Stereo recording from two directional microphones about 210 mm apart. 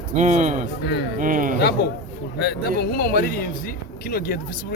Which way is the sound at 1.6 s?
50° left (ahead or behind).